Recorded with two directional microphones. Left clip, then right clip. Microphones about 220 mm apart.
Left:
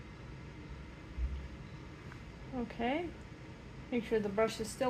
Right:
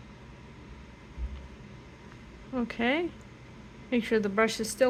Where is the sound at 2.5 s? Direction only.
40° right (ahead or behind).